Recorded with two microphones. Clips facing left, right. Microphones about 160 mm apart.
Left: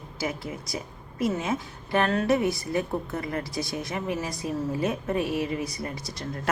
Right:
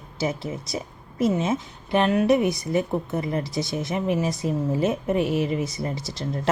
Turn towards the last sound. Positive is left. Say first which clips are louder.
# right 5 dB
turn(degrees=-25)  # may be behind; listen again after turning